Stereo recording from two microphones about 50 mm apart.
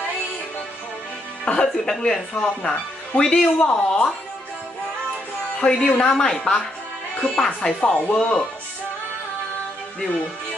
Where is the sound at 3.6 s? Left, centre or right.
Left.